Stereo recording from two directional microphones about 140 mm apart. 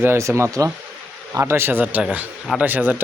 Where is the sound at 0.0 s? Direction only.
20° right (ahead or behind).